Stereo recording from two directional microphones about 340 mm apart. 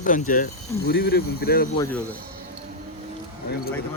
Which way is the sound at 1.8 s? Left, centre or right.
Centre.